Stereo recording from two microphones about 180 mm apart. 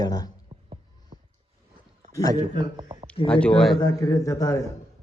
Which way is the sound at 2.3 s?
30° right (ahead or behind).